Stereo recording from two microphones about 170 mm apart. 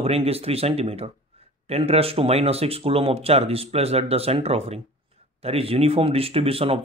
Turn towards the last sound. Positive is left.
turn(degrees=-35)  # may be behind; listen again after turning